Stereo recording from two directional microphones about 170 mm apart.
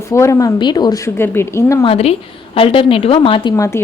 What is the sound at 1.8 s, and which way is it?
Speech, 35° left (ahead or behind).